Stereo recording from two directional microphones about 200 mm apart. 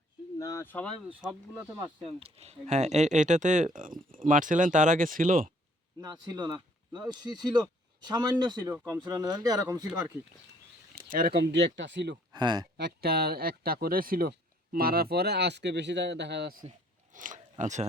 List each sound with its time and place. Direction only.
0.3 s a sound: 15° left (ahead or behind)
1.2 s speech: 20° right (ahead or behind); by 5.5 s 45° right (ahead or behind)
6.0 s speech: 20° right (ahead or behind)
10.9 s speech: 45° right (ahead or behind); by 12.1 s 65° right (ahead or behind)
12.3 s speech: 20° right (ahead or behind)
12.7 s speech: 55° right (ahead or behind)
17.2 s speech: 40° right (ahead or behind)